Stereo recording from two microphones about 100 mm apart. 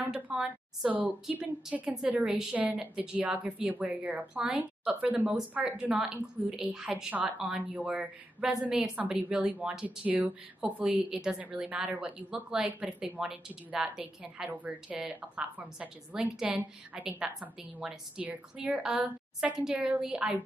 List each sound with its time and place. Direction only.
0.0 s speech: 10° right (ahead or behind)